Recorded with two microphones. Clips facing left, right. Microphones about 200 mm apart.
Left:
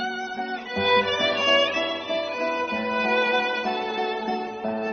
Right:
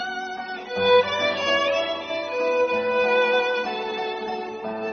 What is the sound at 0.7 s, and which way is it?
Music, 45° right (ahead or behind).